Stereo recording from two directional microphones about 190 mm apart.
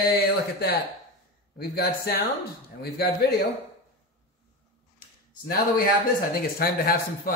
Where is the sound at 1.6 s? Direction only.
55° left (ahead or behind).